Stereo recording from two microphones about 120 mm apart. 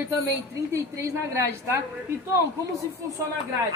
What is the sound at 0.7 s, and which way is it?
A woman's voice, 20° right (ahead or behind).